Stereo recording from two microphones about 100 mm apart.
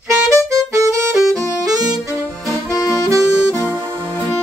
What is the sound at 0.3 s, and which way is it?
Music, 30° right (ahead or behind).